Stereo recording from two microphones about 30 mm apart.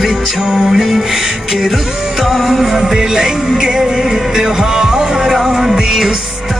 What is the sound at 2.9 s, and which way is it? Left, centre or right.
Music, right.